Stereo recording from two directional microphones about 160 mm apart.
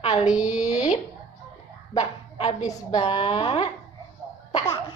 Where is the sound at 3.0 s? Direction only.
35° left (ahead or behind).